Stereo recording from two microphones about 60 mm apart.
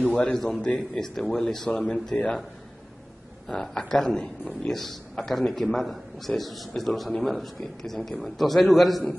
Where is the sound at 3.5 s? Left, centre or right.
Centre.